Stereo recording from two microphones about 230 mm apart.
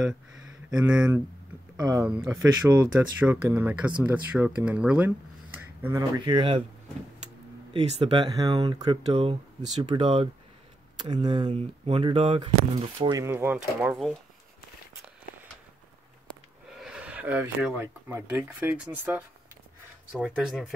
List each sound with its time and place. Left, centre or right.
0.7 s speech: centre; by 6.6 s right
7.7 s speech: right; by 14.1 s centre
16.8 s speech: centre